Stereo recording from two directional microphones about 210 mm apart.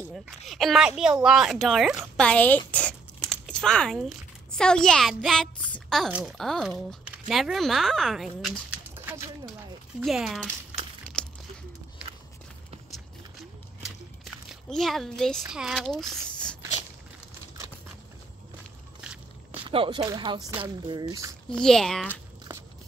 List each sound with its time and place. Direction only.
0.5 s speech: centre (ahead or behind)
14.2 s a child's voice: centre (ahead or behind)
19.6 s speech: 25° right (ahead or behind)
21.5 s speech: 5° left (ahead or behind)